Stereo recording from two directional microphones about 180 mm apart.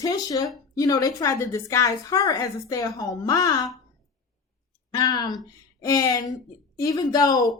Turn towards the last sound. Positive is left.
turn(degrees=20)  # may be behind; listen again after turning